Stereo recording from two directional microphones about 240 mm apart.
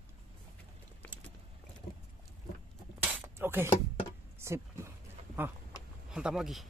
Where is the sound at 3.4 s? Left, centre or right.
Centre.